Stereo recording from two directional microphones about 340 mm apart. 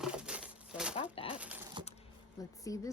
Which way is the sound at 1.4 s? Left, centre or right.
Centre.